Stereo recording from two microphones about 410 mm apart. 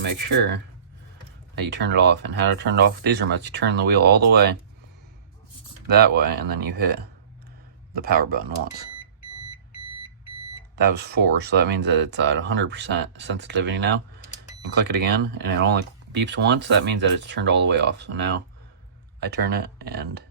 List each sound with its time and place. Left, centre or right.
0.0 s speech: right
6.1 s speech: right
7.9 s speech: right
9.2 s alarm clock: left
10.8 s speech: right